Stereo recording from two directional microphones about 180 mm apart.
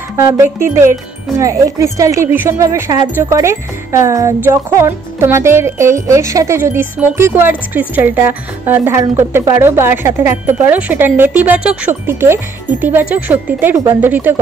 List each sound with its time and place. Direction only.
0.2 s speech: 15° right (ahead or behind)